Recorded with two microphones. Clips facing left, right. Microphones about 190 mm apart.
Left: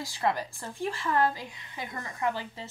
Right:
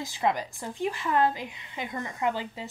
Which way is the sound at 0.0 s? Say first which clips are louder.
Right 2 dB; 15° right (ahead or behind).